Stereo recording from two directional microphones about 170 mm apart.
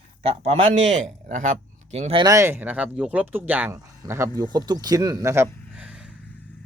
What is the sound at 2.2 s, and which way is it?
Speech, 15° right (ahead or behind).